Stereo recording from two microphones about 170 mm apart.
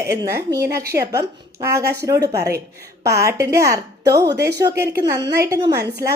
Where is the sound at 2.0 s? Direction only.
20° right (ahead or behind).